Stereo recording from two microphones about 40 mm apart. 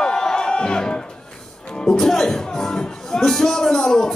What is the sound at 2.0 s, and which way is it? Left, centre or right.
Music, centre.